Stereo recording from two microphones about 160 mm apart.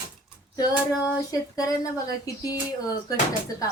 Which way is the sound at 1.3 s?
20° left (ahead or behind).